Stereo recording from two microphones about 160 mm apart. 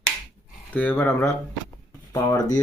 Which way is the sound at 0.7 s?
10° left (ahead or behind).